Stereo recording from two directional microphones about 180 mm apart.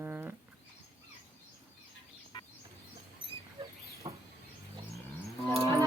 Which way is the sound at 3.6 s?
25° right (ahead or behind).